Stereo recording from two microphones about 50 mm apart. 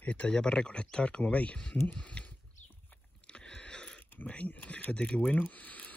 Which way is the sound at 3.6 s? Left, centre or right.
Centre.